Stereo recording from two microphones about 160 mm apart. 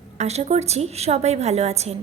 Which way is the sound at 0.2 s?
45° right (ahead or behind).